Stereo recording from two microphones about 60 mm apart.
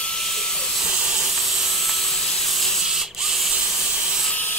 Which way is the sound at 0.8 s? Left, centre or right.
Centre.